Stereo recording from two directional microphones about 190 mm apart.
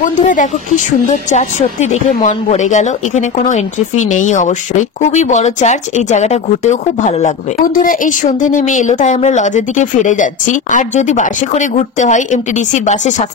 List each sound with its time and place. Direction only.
0.0 s speech: 40° left (ahead or behind)